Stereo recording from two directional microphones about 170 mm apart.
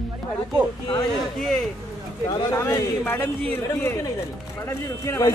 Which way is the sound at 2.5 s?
15° left (ahead or behind).